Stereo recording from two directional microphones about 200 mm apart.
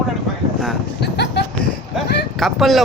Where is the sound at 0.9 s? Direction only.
55° left (ahead or behind).